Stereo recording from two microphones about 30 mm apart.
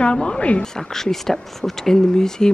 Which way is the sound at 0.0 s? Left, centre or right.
Left.